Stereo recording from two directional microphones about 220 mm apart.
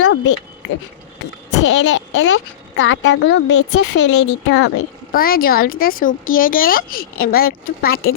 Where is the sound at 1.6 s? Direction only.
55° left (ahead or behind).